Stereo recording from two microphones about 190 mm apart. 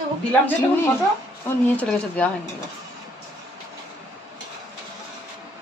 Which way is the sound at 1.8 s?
5° left (ahead or behind).